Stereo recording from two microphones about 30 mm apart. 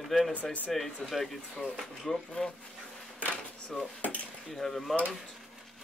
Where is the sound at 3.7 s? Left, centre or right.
Centre.